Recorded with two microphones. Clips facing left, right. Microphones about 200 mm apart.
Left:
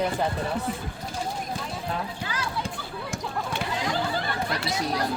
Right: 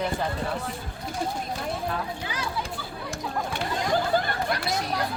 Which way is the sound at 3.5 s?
50° right (ahead or behind).